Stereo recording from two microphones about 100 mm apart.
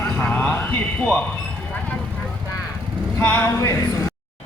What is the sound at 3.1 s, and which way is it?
Speech, 20° left (ahead or behind).